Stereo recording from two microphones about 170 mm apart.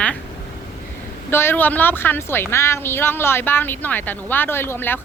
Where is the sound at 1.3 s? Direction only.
15° left (ahead or behind).